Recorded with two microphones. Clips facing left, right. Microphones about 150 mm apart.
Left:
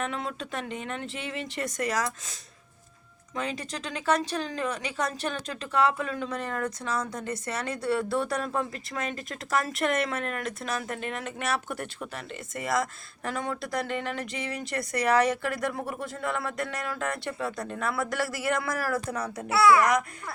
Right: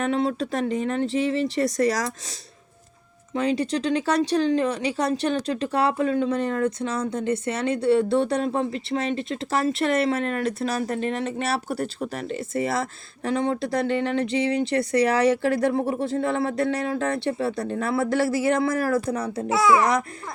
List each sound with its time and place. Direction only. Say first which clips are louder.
0.0 s speech: right 9 dB; 35° right (ahead or behind)
3.3 s speech: right 10 dB; 30° right (ahead or behind)
19.5 s a child's voice: right 1 dB; 20° right (ahead or behind)
19.8 s speech: right 2 dB; 30° right (ahead or behind)